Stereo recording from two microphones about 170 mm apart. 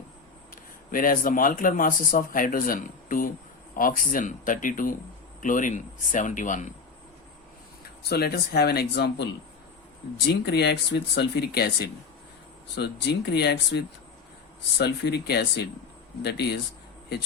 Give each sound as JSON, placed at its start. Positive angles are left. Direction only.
{"t": 0.5, "sound": "speech", "side_deg": 55}
{"t": 8.1, "sound": "speech", "side_deg": 70}